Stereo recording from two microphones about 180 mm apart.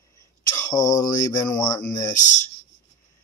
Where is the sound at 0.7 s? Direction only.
20° left (ahead or behind).